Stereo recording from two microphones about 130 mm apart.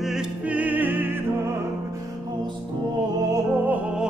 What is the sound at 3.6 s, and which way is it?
Music, 10° right (ahead or behind).